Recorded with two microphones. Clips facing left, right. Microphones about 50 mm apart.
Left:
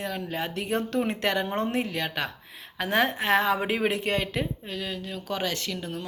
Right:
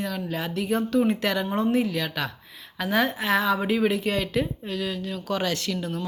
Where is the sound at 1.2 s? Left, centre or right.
Left.